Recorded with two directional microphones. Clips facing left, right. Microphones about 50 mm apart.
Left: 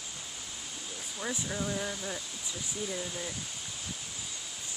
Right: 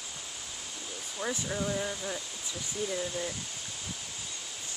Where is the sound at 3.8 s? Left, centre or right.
Centre.